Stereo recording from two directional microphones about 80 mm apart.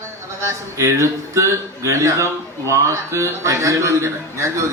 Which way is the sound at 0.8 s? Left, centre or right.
Right.